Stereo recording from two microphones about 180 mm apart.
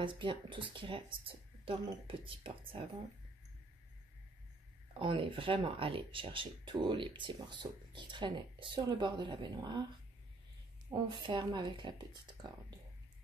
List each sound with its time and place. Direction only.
0.0 s speech: 30° right (ahead or behind)
4.9 s speech: 30° right (ahead or behind)
10.9 s speech: 25° right (ahead or behind)